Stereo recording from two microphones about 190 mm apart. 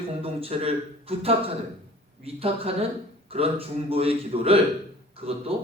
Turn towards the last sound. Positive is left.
turn(degrees=-30)  # may be behind; listen again after turning